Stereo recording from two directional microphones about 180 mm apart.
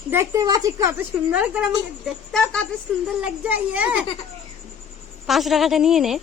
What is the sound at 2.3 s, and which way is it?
A woman's voice, 5° left (ahead or behind).